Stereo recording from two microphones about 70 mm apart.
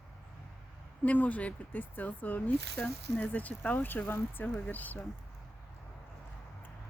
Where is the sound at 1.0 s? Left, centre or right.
Left.